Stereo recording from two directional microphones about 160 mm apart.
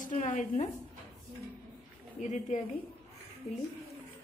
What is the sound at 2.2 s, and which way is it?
Speech, 50° left (ahead or behind).